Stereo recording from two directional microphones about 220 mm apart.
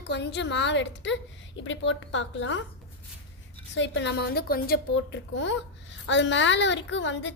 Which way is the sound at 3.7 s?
55° left (ahead or behind).